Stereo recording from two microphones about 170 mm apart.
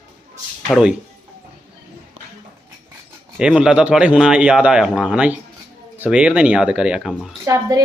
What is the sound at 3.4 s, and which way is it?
Speech, 5° right (ahead or behind).